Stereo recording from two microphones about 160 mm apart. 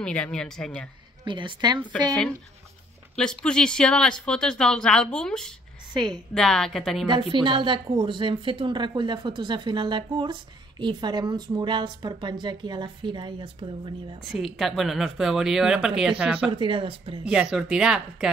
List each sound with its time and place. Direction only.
0.0 s speech: 5° left (ahead or behind)
1.2 s speech: 30° right (ahead or behind)
3.2 s speech: 5° left (ahead or behind)
5.9 s speech: 25° right (ahead or behind)
6.3 s speech: 5° left (ahead or behind)
7.1 s speech: 30° right (ahead or behind)
14.3 s speech: centre (ahead or behind)
16.5 s speech: 30° right (ahead or behind)
17.2 s speech: 5° right (ahead or behind)